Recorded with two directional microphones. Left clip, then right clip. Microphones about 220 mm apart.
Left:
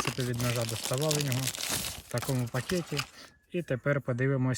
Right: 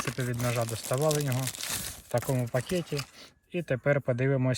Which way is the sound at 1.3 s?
Centre (ahead or behind).